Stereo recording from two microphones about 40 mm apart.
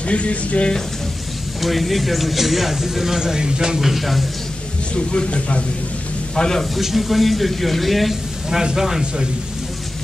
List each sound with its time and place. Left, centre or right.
0.0 s speech: left
1.6 s speech: centre
3.8 s speech: centre
4.9 s speech: left
6.8 s speech: centre
8.5 s speech: centre